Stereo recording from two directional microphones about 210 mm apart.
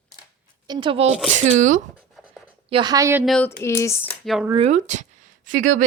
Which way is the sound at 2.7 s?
20° right (ahead or behind).